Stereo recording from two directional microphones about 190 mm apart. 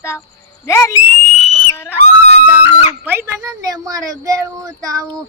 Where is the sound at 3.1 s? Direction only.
15° right (ahead or behind).